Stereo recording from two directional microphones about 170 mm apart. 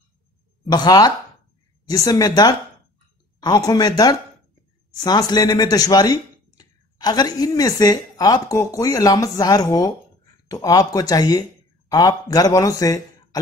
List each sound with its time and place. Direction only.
0.7 s a man's voice: 25° left (ahead or behind)